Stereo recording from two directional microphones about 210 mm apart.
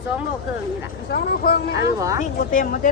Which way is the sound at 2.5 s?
40° left (ahead or behind).